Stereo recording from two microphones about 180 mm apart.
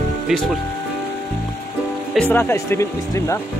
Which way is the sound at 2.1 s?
10° left (ahead or behind).